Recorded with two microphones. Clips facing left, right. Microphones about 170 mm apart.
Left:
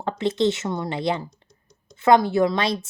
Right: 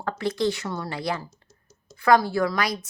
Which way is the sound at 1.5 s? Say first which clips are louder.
Even; 5° right (ahead or behind).